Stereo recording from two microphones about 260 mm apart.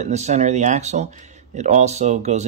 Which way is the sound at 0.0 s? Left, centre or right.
Right.